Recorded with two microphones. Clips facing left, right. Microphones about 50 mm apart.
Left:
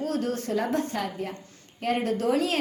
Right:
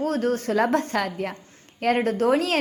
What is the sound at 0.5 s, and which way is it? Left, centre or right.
Speech, right.